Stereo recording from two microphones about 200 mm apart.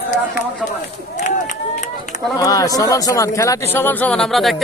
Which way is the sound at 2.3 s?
15° left (ahead or behind).